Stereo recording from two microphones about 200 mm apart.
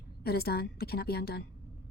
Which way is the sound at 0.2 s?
50° left (ahead or behind).